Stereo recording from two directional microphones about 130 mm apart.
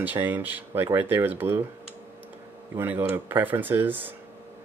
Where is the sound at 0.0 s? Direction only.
15° right (ahead or behind).